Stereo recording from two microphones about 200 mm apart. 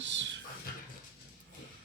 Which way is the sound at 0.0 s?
65° right (ahead or behind).